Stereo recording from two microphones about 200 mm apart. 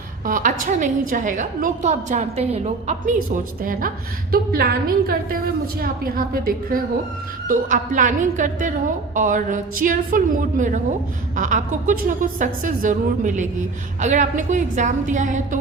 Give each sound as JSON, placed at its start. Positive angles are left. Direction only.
{"t": 0.3, "sound": "speech", "side_deg": -40}
{"t": 3.6, "sound": "a woman's voice", "side_deg": -45}